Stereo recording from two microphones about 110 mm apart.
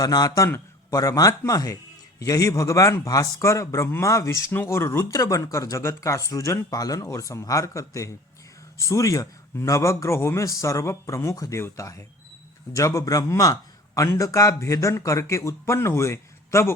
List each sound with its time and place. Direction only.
0.0 s a man's voice: 35° left (ahead or behind)